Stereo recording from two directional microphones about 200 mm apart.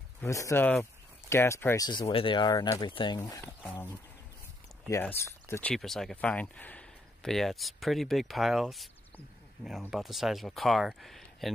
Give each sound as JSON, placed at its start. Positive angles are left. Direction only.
{"t": 0.2, "sound": "speech", "side_deg": 15}